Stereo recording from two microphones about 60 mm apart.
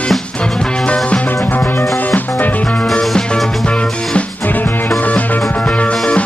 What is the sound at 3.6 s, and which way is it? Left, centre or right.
Music, centre.